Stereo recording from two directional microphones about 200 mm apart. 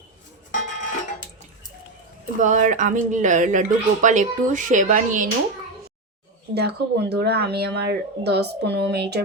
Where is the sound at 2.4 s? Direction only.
40° right (ahead or behind).